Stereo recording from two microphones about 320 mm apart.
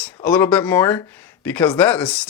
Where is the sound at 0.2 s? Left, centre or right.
Centre.